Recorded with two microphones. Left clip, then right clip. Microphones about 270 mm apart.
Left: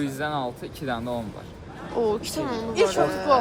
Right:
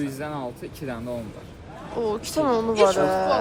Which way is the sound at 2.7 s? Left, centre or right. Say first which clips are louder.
Right 2 dB; left.